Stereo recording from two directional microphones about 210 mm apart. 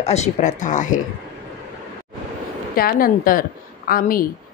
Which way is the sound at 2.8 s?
45° left (ahead or behind).